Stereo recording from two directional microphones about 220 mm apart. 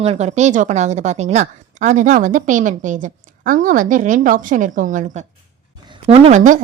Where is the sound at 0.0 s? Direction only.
30° right (ahead or behind).